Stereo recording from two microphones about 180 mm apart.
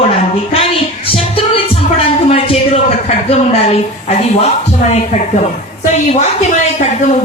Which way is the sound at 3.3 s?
35° left (ahead or behind).